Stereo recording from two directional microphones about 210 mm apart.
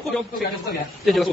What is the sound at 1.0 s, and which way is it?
Speech, centre (ahead or behind).